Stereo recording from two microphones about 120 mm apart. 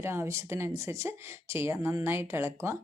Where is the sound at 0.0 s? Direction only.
20° right (ahead or behind).